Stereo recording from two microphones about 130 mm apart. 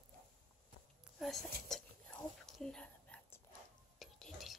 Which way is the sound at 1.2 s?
Centre (ahead or behind).